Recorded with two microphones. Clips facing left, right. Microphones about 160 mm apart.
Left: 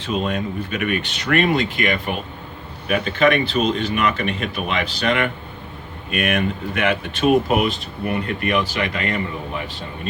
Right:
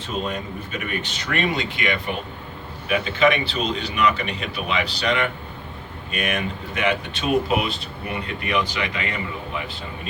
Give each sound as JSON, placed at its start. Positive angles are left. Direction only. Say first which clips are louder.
{"t": 0.1, "sound": "speech", "louder": "left 5 dB", "side_deg": 70}